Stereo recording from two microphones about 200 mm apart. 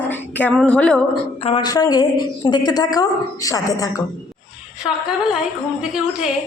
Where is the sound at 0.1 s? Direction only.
10° left (ahead or behind).